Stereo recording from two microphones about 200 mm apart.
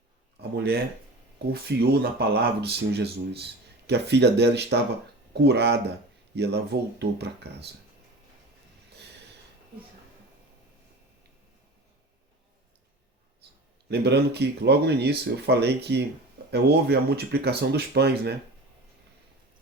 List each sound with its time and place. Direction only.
0.3 s a sound: 55° right (ahead or behind)
1.5 s speech: 50° right (ahead or behind)
13.8 s speech: 55° right (ahead or behind)